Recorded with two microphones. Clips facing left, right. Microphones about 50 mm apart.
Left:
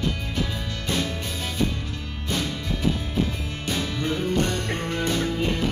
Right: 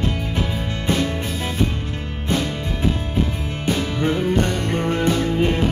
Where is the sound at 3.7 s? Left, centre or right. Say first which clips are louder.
Right 6 dB; right.